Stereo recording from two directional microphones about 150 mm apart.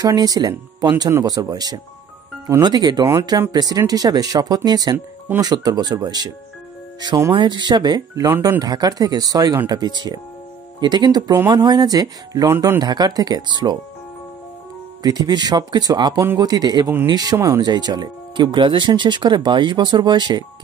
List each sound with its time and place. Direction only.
0.0 s speech: 25° right (ahead or behind)
15.0 s speech: 25° right (ahead or behind)